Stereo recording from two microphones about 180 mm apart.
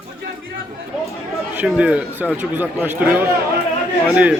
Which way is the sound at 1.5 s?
5° right (ahead or behind).